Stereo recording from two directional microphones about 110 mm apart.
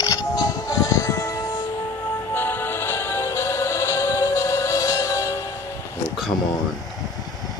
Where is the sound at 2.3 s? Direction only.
20° left (ahead or behind).